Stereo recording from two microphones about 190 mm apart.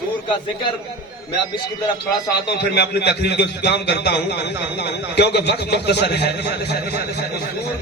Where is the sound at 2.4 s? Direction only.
60° left (ahead or behind).